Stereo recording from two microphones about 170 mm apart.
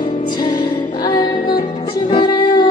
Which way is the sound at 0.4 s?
25° left (ahead or behind).